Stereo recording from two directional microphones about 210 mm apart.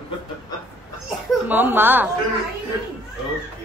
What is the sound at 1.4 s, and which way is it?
Speech, 10° right (ahead or behind).